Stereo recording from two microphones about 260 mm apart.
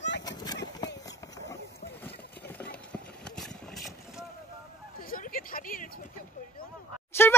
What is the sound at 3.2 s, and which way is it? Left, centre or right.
Vehicle, centre.